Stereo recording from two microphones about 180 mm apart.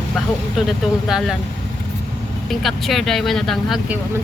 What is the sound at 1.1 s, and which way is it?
Speech, centre (ahead or behind).